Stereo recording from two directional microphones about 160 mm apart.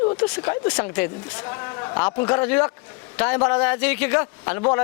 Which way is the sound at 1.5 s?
20° left (ahead or behind).